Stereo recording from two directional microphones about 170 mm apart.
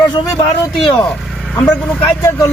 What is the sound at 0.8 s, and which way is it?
Speech, centre (ahead or behind).